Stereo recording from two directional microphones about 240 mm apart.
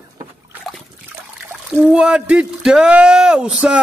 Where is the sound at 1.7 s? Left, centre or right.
Centre.